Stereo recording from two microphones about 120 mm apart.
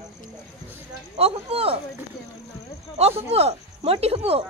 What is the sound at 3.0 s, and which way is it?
Speech, 60° right (ahead or behind).